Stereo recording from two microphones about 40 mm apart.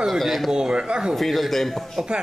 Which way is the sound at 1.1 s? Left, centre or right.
Centre.